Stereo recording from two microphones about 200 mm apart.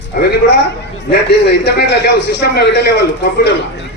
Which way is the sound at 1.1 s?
55° left (ahead or behind).